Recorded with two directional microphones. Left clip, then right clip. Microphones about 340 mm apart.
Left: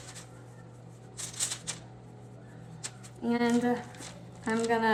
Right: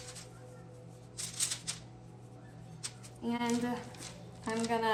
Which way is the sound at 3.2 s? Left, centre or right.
Centre.